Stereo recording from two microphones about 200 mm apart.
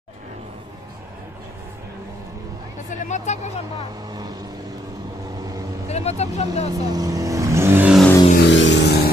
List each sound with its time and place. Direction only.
3.0 s speech: 35° left (ahead or behind)
4.1 s vehicle: 20° right (ahead or behind)
5.9 s speech: 30° left (ahead or behind)
6.7 s vehicle: 20° right (ahead or behind)
8.4 s vehicle: 65° left (ahead or behind)